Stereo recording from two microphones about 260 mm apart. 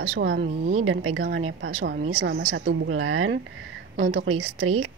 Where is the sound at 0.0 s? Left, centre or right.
Right.